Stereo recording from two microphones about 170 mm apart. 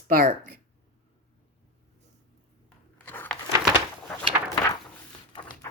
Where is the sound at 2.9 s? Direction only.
10° left (ahead or behind).